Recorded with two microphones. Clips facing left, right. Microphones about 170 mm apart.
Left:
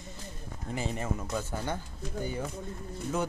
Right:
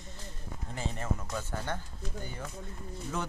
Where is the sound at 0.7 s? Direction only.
15° left (ahead or behind).